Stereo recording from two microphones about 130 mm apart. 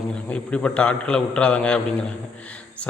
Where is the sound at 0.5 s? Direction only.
10° left (ahead or behind).